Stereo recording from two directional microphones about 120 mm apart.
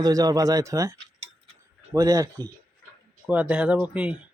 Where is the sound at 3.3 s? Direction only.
10° right (ahead or behind).